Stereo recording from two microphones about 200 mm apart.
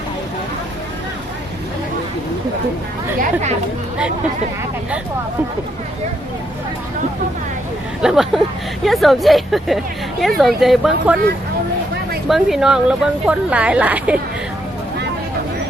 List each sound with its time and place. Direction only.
3.2 s speech: 35° right (ahead or behind)
8.0 s speech: 5° right (ahead or behind)
12.3 s speech: centre (ahead or behind)